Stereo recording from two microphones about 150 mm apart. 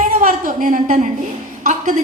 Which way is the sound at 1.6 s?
55° right (ahead or behind).